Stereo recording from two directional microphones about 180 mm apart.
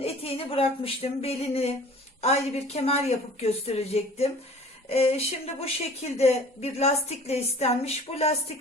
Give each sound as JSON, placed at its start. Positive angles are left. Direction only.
{"t": 0.0, "sound": "speech", "side_deg": 30}